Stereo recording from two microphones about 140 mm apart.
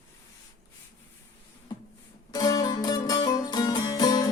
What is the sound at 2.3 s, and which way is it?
Music, 25° left (ahead or behind).